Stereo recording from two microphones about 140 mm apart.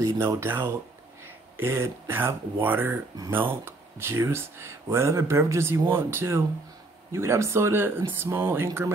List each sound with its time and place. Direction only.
0.0 s speech: 20° right (ahead or behind)